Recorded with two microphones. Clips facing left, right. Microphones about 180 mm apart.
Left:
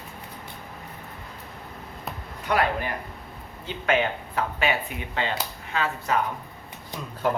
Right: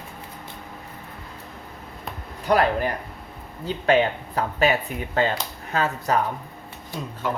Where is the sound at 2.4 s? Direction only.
40° right (ahead or behind).